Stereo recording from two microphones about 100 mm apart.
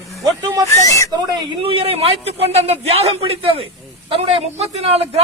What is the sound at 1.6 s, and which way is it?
A man's voice, 65° right (ahead or behind).